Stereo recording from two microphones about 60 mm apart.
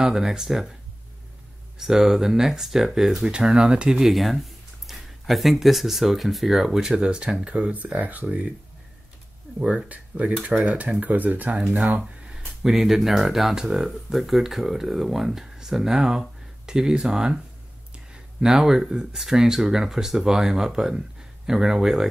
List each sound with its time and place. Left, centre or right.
0.0 s speech: centre
1.8 s speech: centre
4.1 s speech: centre; by 8.5 s right
9.6 s speech: centre
9.8 s speech: right
12.6 s speech: centre